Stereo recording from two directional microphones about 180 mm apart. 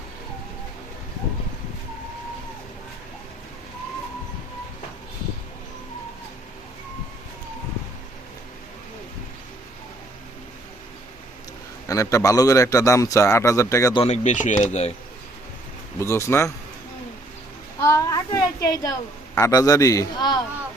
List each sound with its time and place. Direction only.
11.9 s a man's voice: 20° left (ahead or behind)
14.0 s speech: 40° left (ahead or behind)
16.0 s a man's voice: 15° left (ahead or behind)
17.8 s a woman's voice: 20° left (ahead or behind)